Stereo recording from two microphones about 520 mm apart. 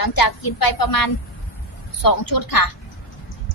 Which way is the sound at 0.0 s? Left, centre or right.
Left.